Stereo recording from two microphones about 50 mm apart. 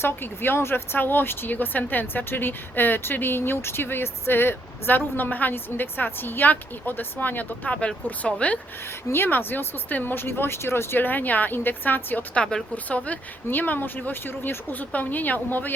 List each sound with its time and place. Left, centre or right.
0.0 s a woman's voice: left
7.7 s speech: left
9.1 s a woman's voice: left
10.9 s speech: left
12.3 s speech: left
13.5 s speech: left